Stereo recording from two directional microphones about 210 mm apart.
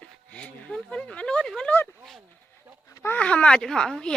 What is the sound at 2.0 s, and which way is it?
Speech, centre (ahead or behind).